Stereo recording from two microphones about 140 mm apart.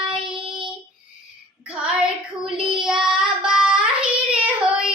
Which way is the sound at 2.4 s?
5° right (ahead or behind).